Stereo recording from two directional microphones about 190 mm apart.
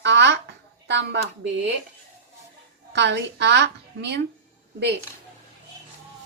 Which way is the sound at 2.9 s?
65° right (ahead or behind).